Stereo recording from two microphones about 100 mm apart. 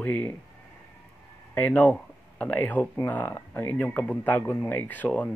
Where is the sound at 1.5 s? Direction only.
15° left (ahead or behind).